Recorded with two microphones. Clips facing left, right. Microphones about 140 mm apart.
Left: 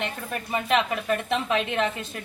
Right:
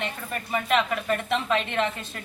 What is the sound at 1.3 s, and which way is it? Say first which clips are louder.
Speech: right 1 dB; 15° left (ahead or behind).